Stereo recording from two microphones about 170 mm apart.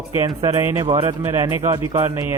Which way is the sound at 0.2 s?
25° right (ahead or behind).